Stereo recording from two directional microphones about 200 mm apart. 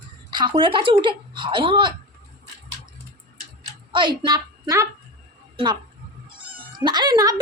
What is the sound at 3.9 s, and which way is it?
A woman's voice, 25° right (ahead or behind).